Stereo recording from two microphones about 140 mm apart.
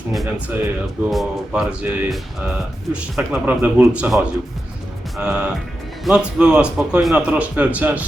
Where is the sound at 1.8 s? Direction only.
15° right (ahead or behind).